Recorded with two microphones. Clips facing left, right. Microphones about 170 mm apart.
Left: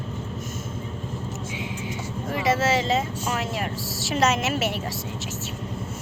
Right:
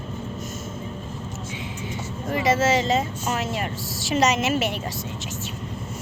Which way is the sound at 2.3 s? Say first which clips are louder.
Right 2 dB; centre (ahead or behind).